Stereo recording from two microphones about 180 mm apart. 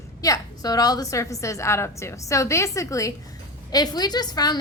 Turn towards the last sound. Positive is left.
turn(degrees=20)  # may be behind; listen again after turning